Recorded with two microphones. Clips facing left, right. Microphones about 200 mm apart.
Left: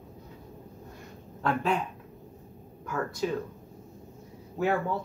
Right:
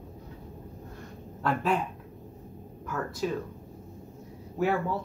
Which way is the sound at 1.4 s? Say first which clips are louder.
Even; 5° right (ahead or behind).